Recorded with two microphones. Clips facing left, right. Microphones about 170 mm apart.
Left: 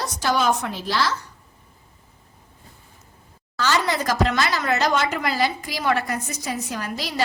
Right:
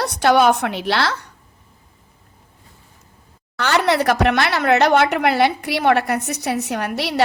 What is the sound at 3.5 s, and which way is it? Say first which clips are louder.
A woman's voice: right 5 dB; 65° right (ahead or behind).